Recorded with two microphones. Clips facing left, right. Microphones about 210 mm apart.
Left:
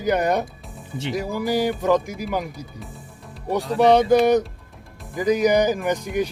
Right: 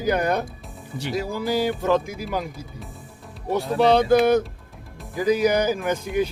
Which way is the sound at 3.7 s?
15° left (ahead or behind).